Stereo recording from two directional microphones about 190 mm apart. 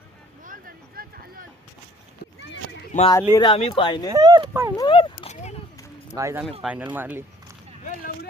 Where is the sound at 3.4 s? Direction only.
25° left (ahead or behind).